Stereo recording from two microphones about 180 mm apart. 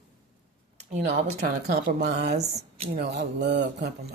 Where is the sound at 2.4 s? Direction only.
35° right (ahead or behind).